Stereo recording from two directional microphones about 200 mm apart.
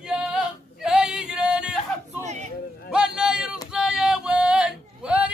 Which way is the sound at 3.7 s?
5° right (ahead or behind).